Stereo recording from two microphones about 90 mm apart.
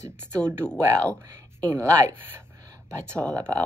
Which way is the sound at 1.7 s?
30° right (ahead or behind).